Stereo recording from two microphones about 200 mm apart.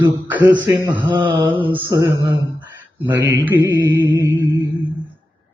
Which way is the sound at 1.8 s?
20° right (ahead or behind).